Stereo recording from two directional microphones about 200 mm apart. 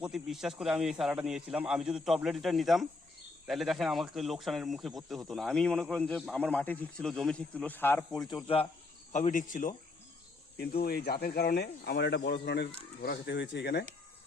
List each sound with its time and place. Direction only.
0.0 s a man's voice: centre (ahead or behind)
9.1 s speech: 40° left (ahead or behind)
10.8 s speech: 50° left (ahead or behind)